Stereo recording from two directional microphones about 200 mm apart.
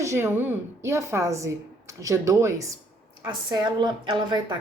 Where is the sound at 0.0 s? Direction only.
15° right (ahead or behind).